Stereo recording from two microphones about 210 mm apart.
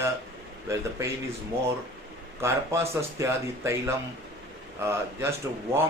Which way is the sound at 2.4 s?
15° right (ahead or behind).